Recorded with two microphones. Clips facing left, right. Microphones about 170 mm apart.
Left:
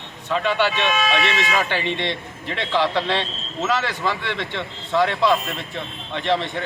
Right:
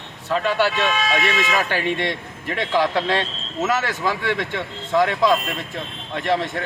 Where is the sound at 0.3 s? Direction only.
10° right (ahead or behind).